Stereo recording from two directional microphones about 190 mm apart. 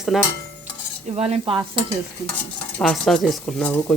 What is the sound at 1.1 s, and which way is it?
Stir, 35° right (ahead or behind).